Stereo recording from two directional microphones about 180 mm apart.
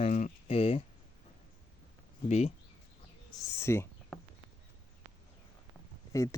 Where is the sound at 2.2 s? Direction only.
40° left (ahead or behind).